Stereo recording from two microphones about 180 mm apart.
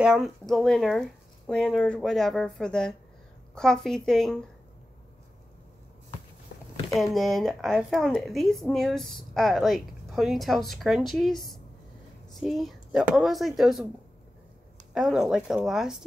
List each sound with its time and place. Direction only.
0.0 s speech: 5° right (ahead or behind)
6.5 s a sound: 65° left (ahead or behind)
6.9 s speech: centre (ahead or behind)
15.0 s speech: 5° right (ahead or behind)